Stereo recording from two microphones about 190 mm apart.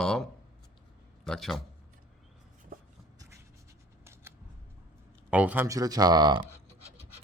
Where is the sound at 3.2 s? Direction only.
15° right (ahead or behind).